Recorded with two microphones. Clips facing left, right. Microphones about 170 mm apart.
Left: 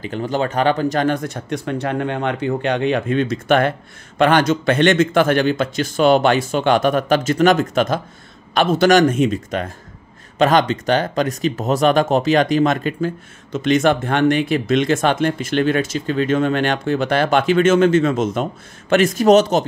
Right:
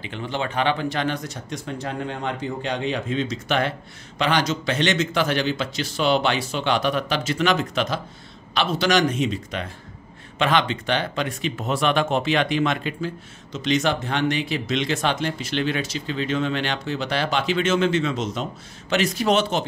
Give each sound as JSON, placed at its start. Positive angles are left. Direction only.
{"t": 0.0, "sound": "speech", "side_deg": 40}